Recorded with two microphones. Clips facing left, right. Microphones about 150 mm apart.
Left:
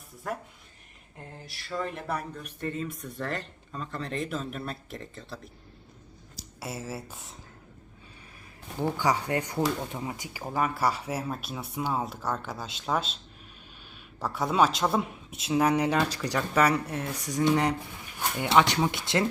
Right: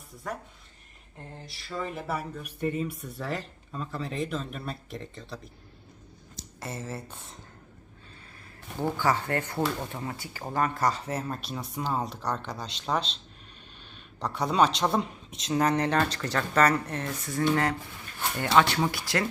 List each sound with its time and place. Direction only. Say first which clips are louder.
0.2 s speech: left 2 dB; 5° left (ahead or behind)
1.5 s speech: left 1 dB; centre (ahead or behind)
6.6 s speech: even; 10° left (ahead or behind)
9.0 s speech: even; 15° left (ahead or behind)